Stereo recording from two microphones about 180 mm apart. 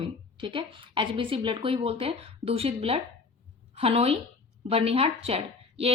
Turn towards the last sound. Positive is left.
turn(degrees=-35)  # may be behind; listen again after turning